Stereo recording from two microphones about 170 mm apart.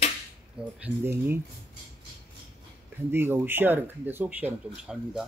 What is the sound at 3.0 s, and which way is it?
Speech, 15° right (ahead or behind).